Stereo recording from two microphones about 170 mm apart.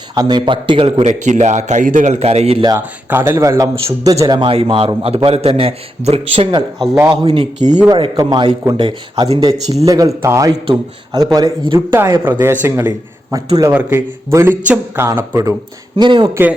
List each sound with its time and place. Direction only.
0.1 s a man's voice: 25° right (ahead or behind)
2.6 s a man's voice: 15° right (ahead or behind)
16.0 s speech: 25° right (ahead or behind)
16.3 s speech: 10° right (ahead or behind)